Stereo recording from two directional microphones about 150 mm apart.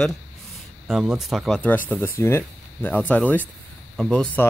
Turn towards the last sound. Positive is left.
turn(degrees=5)  # may be behind; listen again after turning